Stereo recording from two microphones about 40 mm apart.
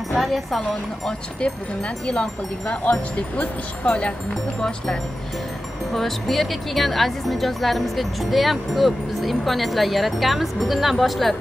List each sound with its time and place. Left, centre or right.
0.2 s speech: centre
0.6 s speech: left
2.7 s speech: left
5.9 s speech: centre